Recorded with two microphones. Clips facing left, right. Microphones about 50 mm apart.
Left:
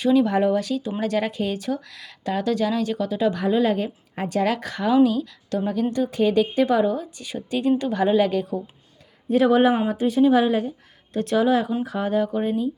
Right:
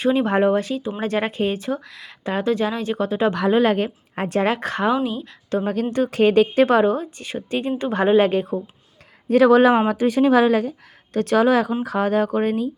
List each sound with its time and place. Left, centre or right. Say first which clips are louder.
0.0 s speech: right 1 dB; right
3.3 s a woman's voice: right 3 dB; right
5.6 s a woman's voice: right 1 dB; right
9.3 s a woman's voice: right 4 dB; right